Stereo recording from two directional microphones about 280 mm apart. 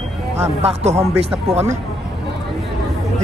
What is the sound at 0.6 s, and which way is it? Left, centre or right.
Speech, right.